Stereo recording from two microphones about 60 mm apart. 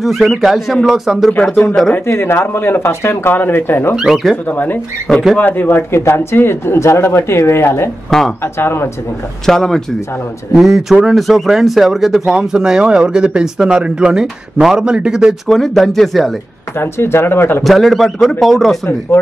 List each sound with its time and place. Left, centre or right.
0.0 s speech: centre
2.0 s speech: left
3.9 s speech: centre
4.5 s speech: left
5.1 s speech: centre
5.4 s speech: left
8.1 s speech: centre
8.5 s speech: left
9.5 s speech: centre
15.4 s speech: centre
16.7 s speech: left
17.6 s speech: centre